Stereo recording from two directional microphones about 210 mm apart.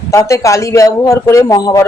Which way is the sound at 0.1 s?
15° left (ahead or behind).